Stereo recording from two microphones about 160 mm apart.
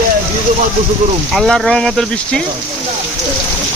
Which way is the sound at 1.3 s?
Centre (ahead or behind).